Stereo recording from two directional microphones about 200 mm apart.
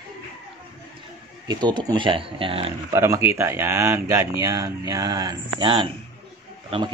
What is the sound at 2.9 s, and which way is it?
Speech, 15° right (ahead or behind).